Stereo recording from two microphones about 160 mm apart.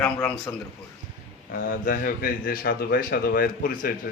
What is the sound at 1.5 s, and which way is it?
Speech, 55° left (ahead or behind).